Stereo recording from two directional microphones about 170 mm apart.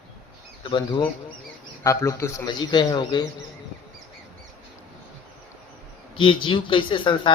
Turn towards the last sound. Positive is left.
turn(degrees=30)  # may be behind; listen again after turning